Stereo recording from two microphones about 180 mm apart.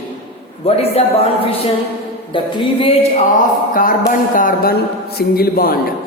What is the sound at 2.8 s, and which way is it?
Speech, 35° left (ahead or behind).